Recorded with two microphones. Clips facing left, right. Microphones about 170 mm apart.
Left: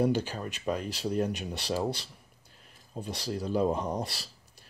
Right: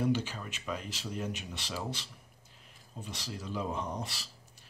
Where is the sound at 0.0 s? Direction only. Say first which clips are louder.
Left 4 dB; 35° left (ahead or behind).